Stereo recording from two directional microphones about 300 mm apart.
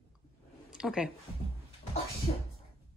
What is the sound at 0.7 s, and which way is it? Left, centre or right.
Speech, centre.